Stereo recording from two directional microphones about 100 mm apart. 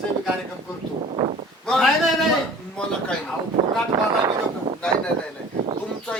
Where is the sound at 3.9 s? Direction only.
40° right (ahead or behind).